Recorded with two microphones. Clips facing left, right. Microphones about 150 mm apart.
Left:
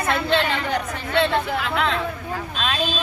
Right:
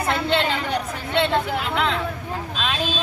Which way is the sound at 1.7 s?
5° right (ahead or behind).